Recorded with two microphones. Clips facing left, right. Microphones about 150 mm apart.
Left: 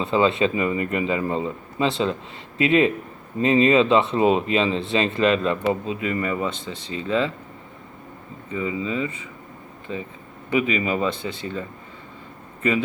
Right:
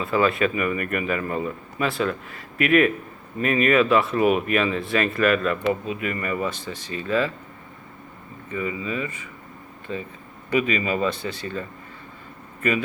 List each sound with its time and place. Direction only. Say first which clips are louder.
0.0 s speech: left 2 dB; 25° left (ahead or behind)
8.4 s speech: left 2 dB; 20° left (ahead or behind)